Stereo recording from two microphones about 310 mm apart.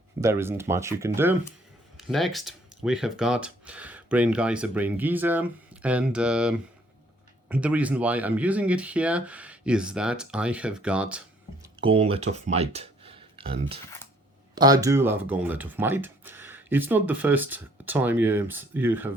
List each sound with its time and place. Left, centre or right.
0.2 s speech: centre
11.6 s speech: centre